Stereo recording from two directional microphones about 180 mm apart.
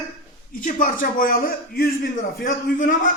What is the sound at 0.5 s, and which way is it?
A man's voice, 50° left (ahead or behind).